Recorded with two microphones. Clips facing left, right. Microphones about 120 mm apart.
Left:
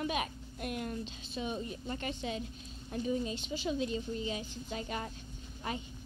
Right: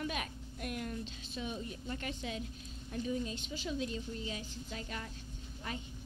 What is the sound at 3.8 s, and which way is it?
A woman's voice, 5° left (ahead or behind).